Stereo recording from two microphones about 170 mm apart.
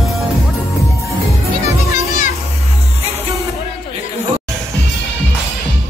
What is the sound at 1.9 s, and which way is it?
Music, 50° left (ahead or behind).